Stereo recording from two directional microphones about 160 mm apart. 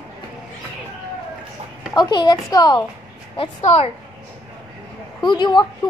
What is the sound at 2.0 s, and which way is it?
Speech, 25° left (ahead or behind).